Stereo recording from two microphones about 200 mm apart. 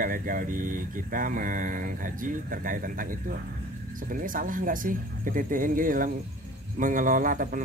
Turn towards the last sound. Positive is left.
turn(degrees=-40)  # may be behind; listen again after turning